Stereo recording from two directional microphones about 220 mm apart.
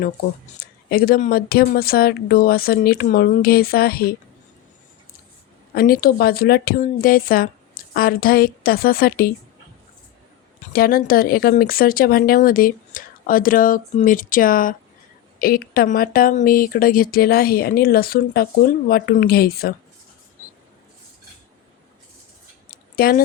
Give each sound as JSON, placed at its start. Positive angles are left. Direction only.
{"t": 0.6, "sound": "speech", "side_deg": 40}
{"t": 5.7, "sound": "speech", "side_deg": 40}
{"t": 10.7, "sound": "speech", "side_deg": 40}
{"t": 22.7, "sound": "a sound", "side_deg": 40}